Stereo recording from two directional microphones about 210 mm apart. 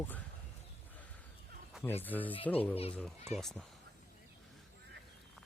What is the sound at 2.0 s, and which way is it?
Speech, 10° left (ahead or behind).